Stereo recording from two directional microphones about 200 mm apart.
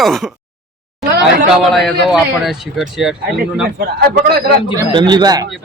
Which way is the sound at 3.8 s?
50° right (ahead or behind).